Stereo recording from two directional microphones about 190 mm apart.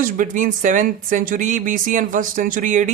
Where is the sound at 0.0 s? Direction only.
45° right (ahead or behind).